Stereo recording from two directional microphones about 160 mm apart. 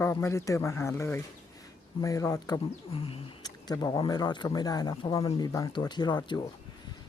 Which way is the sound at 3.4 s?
25° left (ahead or behind).